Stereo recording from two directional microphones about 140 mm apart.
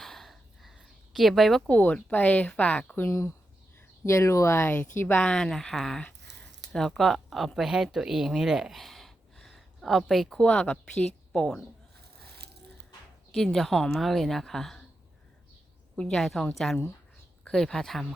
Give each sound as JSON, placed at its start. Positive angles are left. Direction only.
{"t": 0.0, "sound": "a woman's voice", "side_deg": 0}
{"t": 13.3, "sound": "a woman's voice", "side_deg": 5}
{"t": 16.0, "sound": "a woman's voice", "side_deg": 5}